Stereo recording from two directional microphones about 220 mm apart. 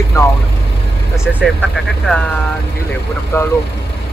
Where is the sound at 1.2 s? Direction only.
5° right (ahead or behind).